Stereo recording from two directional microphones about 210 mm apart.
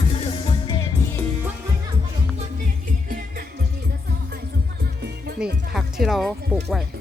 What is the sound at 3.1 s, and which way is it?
Music, 40° right (ahead or behind).